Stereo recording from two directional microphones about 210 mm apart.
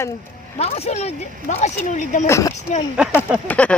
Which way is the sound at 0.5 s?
30° left (ahead or behind).